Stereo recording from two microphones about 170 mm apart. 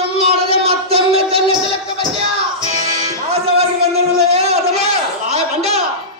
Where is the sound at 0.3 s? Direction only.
35° right (ahead or behind).